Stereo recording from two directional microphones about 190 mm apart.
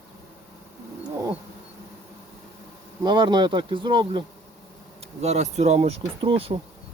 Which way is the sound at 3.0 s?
25° right (ahead or behind).